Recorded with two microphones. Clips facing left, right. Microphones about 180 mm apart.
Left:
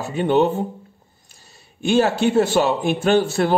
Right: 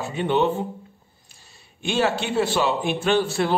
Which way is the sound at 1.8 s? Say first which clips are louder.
Left 6 dB; 45° left (ahead or behind).